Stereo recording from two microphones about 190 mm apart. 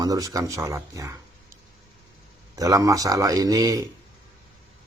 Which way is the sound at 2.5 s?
15° right (ahead or behind).